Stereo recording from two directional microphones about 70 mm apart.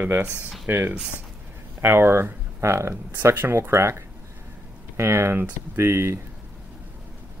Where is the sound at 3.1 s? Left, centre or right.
Right.